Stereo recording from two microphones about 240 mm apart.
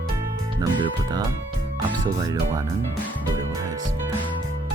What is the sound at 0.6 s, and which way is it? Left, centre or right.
Speech, centre.